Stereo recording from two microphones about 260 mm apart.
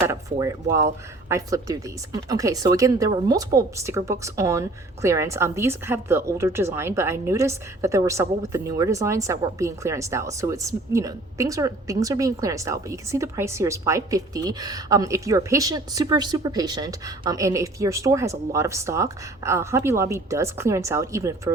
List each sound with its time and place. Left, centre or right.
0.0 s a woman's voice: centre